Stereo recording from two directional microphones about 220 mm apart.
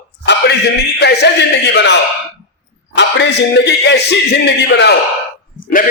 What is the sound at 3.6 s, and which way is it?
Speech, 50° left (ahead or behind).